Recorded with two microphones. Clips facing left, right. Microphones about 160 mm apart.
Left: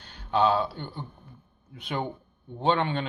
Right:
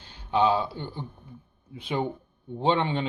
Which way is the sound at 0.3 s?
20° right (ahead or behind).